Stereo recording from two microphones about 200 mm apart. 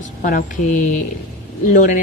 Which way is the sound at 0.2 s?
40° left (ahead or behind).